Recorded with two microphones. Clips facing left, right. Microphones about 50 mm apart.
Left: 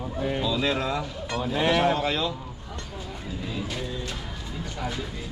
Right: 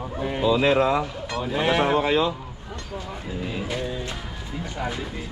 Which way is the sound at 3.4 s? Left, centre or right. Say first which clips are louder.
Right 3 dB; right.